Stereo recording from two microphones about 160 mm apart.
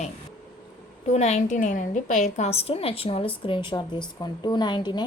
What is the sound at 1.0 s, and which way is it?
A woman's voice, 45° left (ahead or behind).